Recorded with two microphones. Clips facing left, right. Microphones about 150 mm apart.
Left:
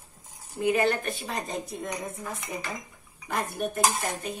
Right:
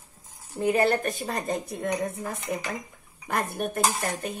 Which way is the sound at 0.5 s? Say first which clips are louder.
Right 2 dB; 40° right (ahead or behind).